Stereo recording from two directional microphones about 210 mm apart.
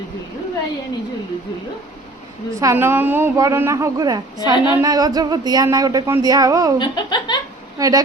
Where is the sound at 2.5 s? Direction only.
15° right (ahead or behind).